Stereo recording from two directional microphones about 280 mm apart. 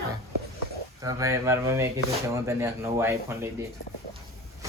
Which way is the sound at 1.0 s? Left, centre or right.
Centre.